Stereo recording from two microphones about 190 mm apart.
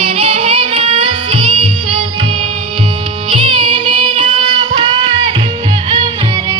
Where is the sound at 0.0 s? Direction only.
30° right (ahead or behind).